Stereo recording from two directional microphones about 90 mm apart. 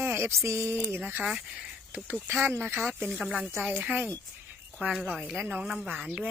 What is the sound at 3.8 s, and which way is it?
Speech, 20° right (ahead or behind).